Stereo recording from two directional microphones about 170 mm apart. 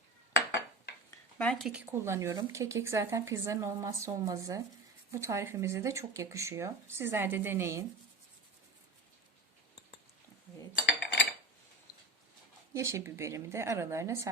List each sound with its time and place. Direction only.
1.4 s speech: centre (ahead or behind); by 7.9 s 15° right (ahead or behind)
10.8 s dishes: 90° left
12.7 s speech: 15° right (ahead or behind)